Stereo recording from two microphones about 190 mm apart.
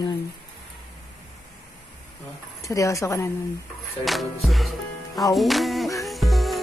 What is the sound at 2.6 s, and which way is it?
Speech, 15° left (ahead or behind).